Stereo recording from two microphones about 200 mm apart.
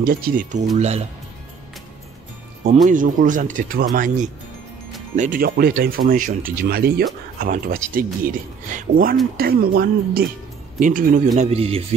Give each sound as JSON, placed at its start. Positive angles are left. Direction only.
{"t": 0.0, "sound": "speech", "side_deg": -45}
{"t": 2.7, "sound": "speech", "side_deg": -40}
{"t": 11.3, "sound": "speech", "side_deg": -30}